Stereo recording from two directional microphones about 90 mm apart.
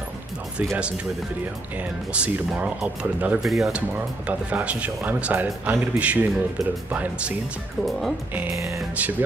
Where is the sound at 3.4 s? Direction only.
5° right (ahead or behind).